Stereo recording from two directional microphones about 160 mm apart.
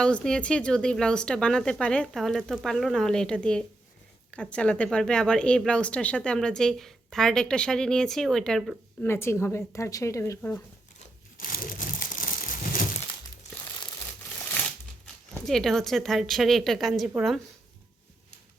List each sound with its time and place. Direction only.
0.0 s a woman's voice: 5° left (ahead or behind)
9.0 s speech: 15° left (ahead or behind)
11.3 s crumpling: 60° left (ahead or behind)
15.0 s speech: 5° left (ahead or behind)